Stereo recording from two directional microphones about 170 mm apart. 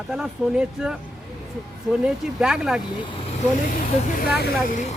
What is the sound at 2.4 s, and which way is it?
Speech, 5° right (ahead or behind).